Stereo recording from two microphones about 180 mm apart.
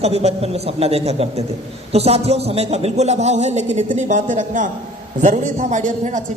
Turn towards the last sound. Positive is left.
turn(degrees=-45)  # may be behind; listen again after turning